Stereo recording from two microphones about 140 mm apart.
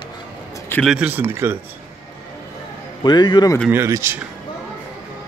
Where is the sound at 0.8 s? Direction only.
5° right (ahead or behind).